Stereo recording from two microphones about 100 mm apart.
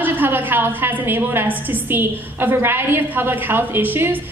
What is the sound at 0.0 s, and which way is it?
A woman's voice, 20° right (ahead or behind).